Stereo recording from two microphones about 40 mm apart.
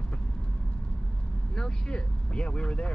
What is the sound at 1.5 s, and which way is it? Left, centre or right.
Speech, left.